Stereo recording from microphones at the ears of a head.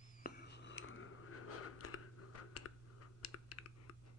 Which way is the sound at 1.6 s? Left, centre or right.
Left.